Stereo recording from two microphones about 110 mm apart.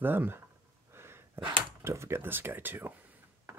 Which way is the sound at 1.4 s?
50° right (ahead or behind).